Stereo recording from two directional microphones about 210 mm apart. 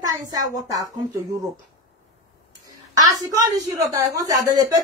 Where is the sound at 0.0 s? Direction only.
15° right (ahead or behind).